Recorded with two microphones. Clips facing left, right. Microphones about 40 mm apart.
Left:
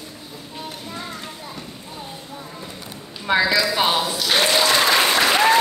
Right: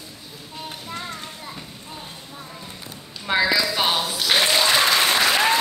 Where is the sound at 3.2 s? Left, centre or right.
Centre.